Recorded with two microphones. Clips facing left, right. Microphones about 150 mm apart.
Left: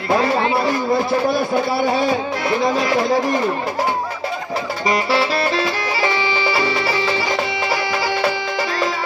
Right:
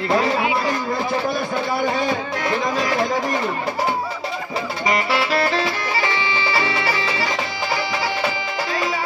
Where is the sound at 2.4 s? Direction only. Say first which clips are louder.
Left 3 dB; 35° left (ahead or behind).